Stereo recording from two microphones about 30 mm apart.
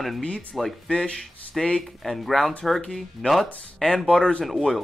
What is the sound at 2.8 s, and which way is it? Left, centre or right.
Speech, left.